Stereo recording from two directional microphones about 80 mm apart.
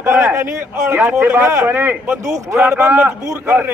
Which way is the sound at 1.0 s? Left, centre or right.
Right.